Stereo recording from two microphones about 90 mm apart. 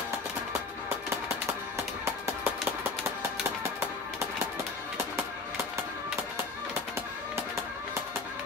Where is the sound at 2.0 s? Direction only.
30° right (ahead or behind).